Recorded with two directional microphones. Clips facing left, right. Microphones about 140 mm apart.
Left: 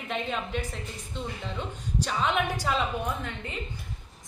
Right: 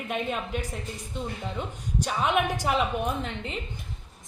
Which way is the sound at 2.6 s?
20° right (ahead or behind).